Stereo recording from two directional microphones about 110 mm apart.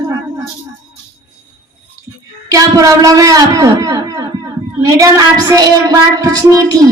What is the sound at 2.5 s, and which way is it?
A woman's voice, 30° right (ahead or behind).